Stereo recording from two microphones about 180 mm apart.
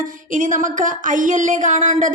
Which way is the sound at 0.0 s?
45° right (ahead or behind).